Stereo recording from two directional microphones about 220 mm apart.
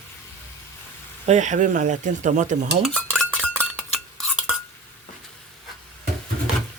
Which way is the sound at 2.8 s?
Centre (ahead or behind).